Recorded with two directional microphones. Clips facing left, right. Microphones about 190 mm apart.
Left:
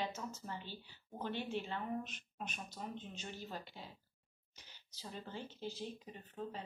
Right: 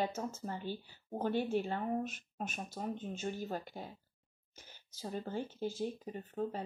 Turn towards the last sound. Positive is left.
turn(degrees=-50)  # may be behind; listen again after turning